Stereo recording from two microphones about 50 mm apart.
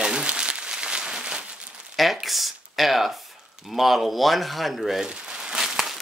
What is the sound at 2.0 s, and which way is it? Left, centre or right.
Speech, centre.